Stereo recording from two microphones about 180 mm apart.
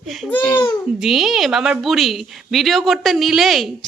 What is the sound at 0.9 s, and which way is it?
A woman's voice, centre (ahead or behind).